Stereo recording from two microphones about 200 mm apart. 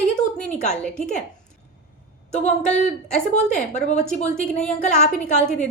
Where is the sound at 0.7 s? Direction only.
5° left (ahead or behind).